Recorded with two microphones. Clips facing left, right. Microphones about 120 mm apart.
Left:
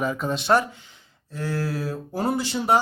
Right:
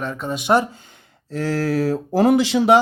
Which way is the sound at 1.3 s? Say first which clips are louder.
Right 7 dB; 80° right.